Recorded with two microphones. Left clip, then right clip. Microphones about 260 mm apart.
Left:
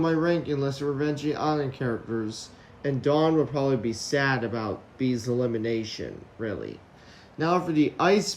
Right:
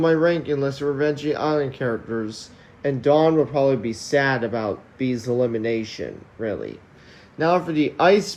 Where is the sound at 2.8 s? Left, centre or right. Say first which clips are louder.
Right 6 dB; centre.